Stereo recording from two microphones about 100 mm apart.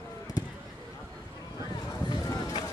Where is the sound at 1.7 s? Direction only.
40° left (ahead or behind).